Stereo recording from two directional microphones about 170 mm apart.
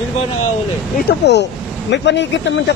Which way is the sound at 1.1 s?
85° left.